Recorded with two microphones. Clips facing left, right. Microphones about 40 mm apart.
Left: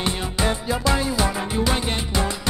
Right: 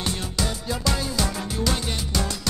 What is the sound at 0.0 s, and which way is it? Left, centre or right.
Music, left.